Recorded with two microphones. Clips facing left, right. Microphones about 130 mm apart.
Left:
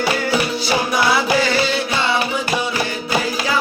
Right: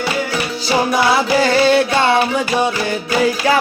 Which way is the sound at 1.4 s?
55° right (ahead or behind).